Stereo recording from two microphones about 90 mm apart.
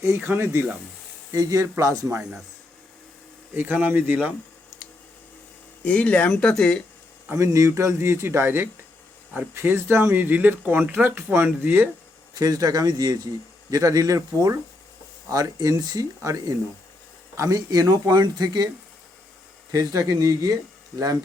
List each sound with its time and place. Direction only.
0.2 s speech: 25° right (ahead or behind)
1.3 s speech: 40° right (ahead or behind)
3.5 s speech: 20° right (ahead or behind)
5.8 s speech: 15° left (ahead or behind)
7.3 s speech: 35° right (ahead or behind)
12.3 s a man's voice: 45° right (ahead or behind)
15.3 s a man's voice: 40° right (ahead or behind)
19.7 s speech: 40° right (ahead or behind)